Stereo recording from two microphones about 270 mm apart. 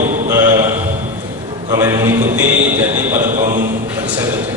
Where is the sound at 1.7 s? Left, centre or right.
Centre.